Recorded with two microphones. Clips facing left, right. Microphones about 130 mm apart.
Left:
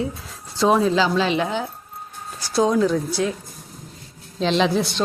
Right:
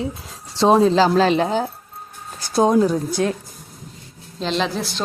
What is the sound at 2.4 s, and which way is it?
Speech, 50° right (ahead or behind).